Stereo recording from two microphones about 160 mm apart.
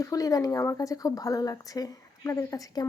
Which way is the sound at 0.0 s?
20° left (ahead or behind).